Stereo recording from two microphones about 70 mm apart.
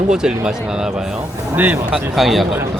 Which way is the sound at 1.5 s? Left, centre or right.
Right.